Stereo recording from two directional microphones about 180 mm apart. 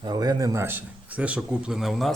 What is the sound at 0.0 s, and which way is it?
A man's voice, 20° right (ahead or behind).